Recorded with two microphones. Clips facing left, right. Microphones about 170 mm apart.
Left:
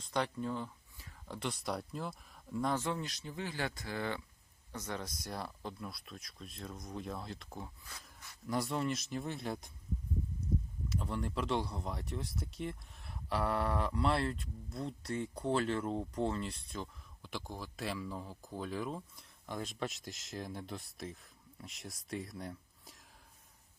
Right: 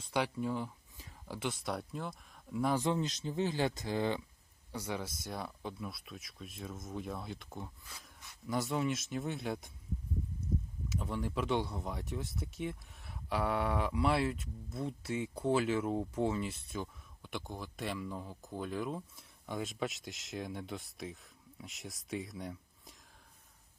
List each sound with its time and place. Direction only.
0.0 s speech: 10° right (ahead or behind)
1.3 s speech: centre (ahead or behind)
2.8 s speech: 20° right (ahead or behind)
4.7 s speech: 10° right (ahead or behind)
10.8 s speech: centre (ahead or behind)